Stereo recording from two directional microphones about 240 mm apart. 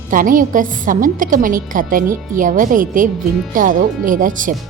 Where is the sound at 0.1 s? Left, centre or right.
Right.